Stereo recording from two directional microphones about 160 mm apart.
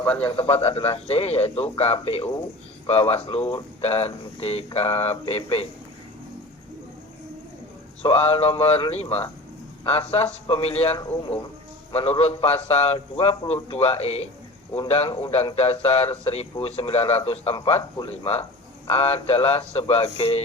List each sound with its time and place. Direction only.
0.0 s a man's voice: 10° left (ahead or behind)
0.3 s speech: 35° left (ahead or behind)
8.0 s speech: 35° left (ahead or behind)